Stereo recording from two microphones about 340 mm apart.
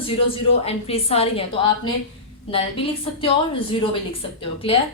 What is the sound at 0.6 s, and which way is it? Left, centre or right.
A woman's voice, centre.